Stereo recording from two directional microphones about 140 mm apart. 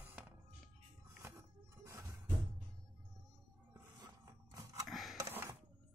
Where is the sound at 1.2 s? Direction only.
20° right (ahead or behind).